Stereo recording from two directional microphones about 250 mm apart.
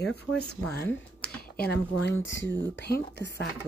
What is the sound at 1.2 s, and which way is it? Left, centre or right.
Speech, left.